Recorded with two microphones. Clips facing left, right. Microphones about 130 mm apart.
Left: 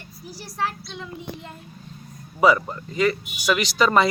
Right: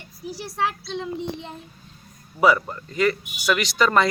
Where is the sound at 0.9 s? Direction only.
30° right (ahead or behind).